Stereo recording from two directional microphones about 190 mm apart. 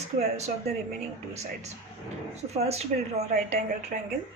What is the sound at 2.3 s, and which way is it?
A woman's voice, 35° right (ahead or behind).